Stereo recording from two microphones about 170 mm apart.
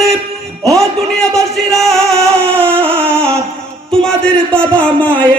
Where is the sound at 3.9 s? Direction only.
5° left (ahead or behind).